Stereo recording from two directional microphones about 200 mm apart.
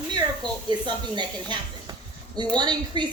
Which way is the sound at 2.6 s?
20° right (ahead or behind).